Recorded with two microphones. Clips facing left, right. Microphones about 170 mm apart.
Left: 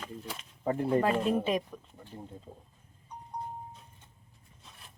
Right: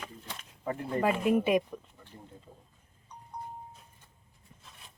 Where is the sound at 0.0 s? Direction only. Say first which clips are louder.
Left 3 dB; 5° left (ahead or behind).